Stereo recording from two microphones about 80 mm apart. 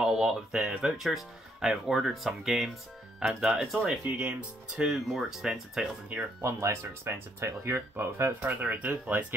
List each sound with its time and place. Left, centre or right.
0.0 s speech: centre
4.0 s speech: centre
4.8 s speech: centre
6.4 s speech: right
8.4 s speech: centre